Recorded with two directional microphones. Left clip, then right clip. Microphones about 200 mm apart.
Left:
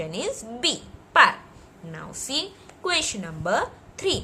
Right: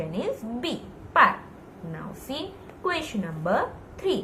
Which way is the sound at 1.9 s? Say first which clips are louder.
Left 6 dB; 65° left (ahead or behind).